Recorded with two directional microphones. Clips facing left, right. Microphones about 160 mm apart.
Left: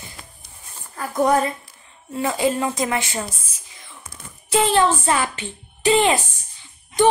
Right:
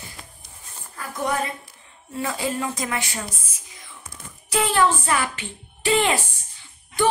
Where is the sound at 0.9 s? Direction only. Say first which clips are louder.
Left 8 dB; 40° left (ahead or behind).